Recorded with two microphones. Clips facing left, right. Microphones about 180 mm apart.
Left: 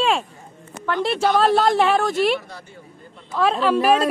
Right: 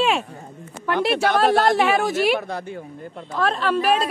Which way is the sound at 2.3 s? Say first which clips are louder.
Right 4 dB; 55° right (ahead or behind).